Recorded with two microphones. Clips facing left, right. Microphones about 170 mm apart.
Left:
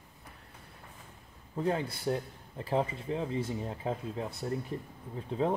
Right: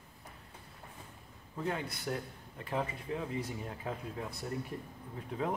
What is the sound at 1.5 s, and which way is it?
Speech, 30° left (ahead or behind).